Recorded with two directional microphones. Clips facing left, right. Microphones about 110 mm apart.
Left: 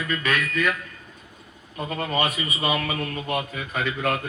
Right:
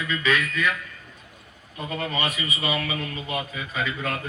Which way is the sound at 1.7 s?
35° left (ahead or behind).